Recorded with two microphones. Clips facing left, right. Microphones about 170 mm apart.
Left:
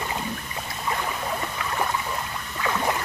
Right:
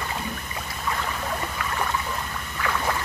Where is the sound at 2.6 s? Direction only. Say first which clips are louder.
Left 1 dB; 20° left (ahead or behind).